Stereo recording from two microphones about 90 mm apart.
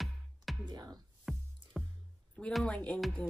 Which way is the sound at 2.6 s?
15° left (ahead or behind).